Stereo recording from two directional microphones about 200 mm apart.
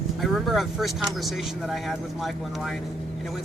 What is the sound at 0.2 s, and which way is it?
Speech, centre (ahead or behind).